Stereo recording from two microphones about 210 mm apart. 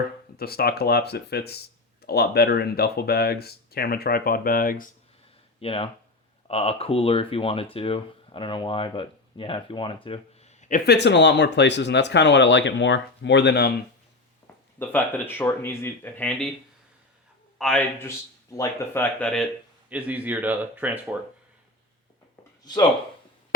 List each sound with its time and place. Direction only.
0.3 s speech: 45° left (ahead or behind)
5.5 s speech: 25° left (ahead or behind)
10.9 s speech: 55° left (ahead or behind)
14.4 s speech: 10° left (ahead or behind)
17.6 s a man's voice: 5° left (ahead or behind)
18.5 s speech: 15° left (ahead or behind)
19.9 s speech: 5° right (ahead or behind)
22.6 s speech: 20° left (ahead or behind)